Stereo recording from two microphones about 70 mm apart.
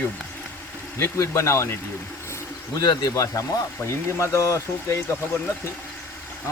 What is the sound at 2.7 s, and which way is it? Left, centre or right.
Speech, left.